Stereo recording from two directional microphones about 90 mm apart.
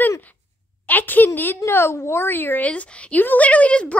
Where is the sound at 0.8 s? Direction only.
20° left (ahead or behind).